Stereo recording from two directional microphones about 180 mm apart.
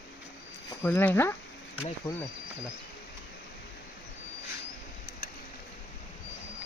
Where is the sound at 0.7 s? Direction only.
10° left (ahead or behind).